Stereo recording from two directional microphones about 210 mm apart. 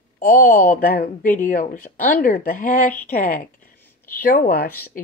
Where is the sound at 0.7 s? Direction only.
45° left (ahead or behind).